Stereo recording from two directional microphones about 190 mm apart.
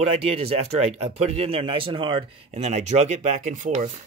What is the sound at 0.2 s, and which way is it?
Speech, 30° right (ahead or behind).